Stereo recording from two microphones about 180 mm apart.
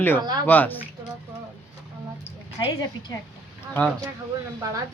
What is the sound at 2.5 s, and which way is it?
Speech, 25° left (ahead or behind).